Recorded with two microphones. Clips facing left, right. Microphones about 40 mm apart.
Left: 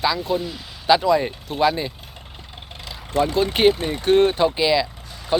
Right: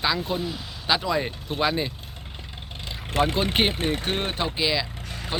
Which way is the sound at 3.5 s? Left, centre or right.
Centre.